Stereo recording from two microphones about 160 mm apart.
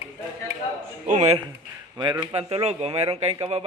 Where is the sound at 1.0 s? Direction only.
45° right (ahead or behind).